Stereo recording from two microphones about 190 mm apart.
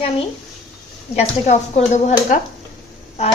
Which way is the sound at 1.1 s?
35° left (ahead or behind).